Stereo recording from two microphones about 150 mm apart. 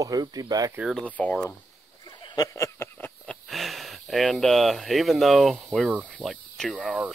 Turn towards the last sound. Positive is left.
turn(degrees=-5)  # may be behind; listen again after turning